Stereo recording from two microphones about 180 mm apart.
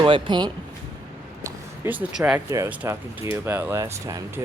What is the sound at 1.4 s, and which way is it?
Speech, 10° right (ahead or behind).